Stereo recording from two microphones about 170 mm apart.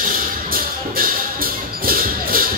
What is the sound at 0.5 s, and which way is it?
Music, 55° right (ahead or behind).